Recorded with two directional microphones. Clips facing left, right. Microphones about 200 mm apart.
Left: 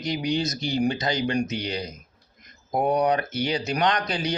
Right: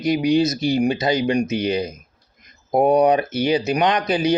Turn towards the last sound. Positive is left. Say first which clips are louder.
# right 6 dB
turn(degrees=-20)  # may be behind; listen again after turning